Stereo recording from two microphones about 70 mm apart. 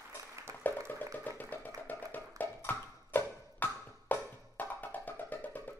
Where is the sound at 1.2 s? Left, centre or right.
Left.